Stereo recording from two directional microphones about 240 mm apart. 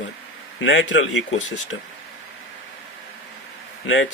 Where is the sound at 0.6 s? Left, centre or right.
Left.